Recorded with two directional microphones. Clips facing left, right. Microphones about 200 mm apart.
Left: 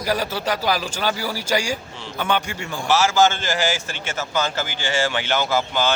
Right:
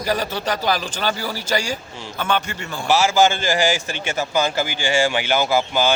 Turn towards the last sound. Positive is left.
turn(degrees=-10)  # may be behind; listen again after turning